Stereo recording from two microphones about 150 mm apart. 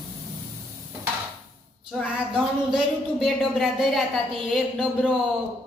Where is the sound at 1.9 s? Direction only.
5° right (ahead or behind).